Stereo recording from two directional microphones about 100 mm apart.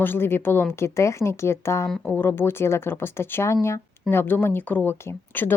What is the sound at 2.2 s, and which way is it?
Speech, 20° left (ahead or behind).